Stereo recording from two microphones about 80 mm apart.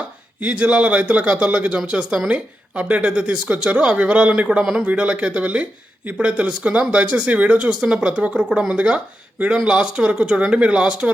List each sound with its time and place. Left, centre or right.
0.3 s speech: centre